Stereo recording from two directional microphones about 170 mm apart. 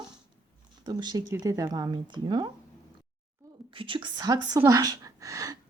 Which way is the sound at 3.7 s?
30° right (ahead or behind).